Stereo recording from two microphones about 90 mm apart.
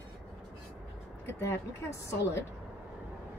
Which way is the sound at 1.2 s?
30° left (ahead or behind).